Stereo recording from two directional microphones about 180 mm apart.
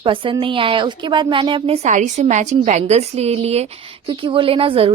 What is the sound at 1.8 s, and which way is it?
A woman's voice, 40° right (ahead or behind).